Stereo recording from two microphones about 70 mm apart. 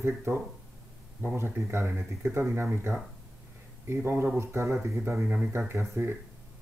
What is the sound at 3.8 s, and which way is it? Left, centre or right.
Speech, right.